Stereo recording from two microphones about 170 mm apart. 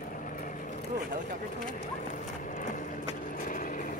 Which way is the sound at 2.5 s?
50° left (ahead or behind).